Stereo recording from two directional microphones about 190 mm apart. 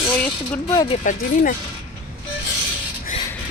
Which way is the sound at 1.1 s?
40° left (ahead or behind).